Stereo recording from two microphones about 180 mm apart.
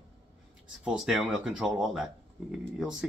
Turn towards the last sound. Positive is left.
turn(degrees=-5)  # may be behind; listen again after turning